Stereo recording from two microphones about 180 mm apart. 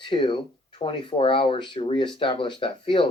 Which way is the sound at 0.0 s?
25° left (ahead or behind).